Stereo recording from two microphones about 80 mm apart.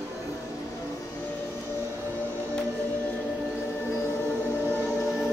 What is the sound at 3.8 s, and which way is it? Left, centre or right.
Music, left.